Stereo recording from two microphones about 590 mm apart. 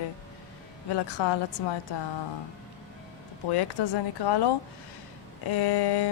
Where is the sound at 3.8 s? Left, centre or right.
Left.